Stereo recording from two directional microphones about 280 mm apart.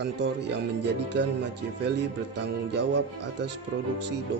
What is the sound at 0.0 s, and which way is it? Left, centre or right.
A man's voice, right.